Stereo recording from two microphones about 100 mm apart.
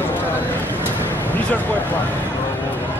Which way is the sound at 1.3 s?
15° left (ahead or behind).